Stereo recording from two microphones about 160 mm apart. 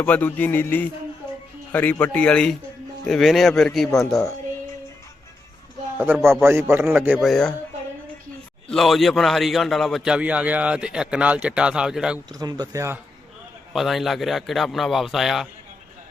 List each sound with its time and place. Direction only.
0.0 s a man's voice: 10° left (ahead or behind)
6.0 s a man's voice: 10° right (ahead or behind)
7.2 s a man's voice: centre (ahead or behind)
8.7 s a man's voice: centre (ahead or behind)
12.4 s speech: 25° right (ahead or behind)
13.7 s a man's voice: centre (ahead or behind)